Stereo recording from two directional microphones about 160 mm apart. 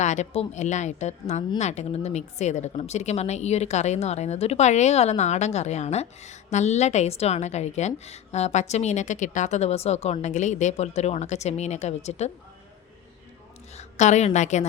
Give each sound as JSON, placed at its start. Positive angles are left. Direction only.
{"t": 0.0, "sound": "speech", "side_deg": 45}
{"t": 13.7, "sound": "a woman's voice", "side_deg": 45}